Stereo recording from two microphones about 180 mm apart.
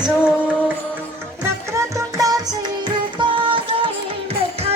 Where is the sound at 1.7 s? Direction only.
20° right (ahead or behind).